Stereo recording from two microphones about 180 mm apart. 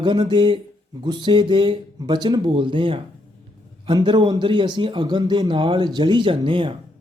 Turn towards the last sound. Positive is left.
turn(degrees=-30)  # may be behind; listen again after turning